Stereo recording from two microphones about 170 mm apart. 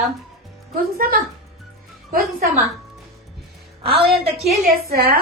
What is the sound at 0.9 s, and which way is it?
A woman's voice, 60° right (ahead or behind).